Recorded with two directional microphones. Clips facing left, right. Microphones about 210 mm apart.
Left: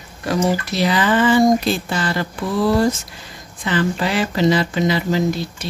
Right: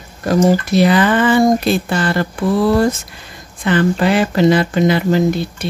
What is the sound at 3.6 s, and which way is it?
Speech, 55° right (ahead or behind).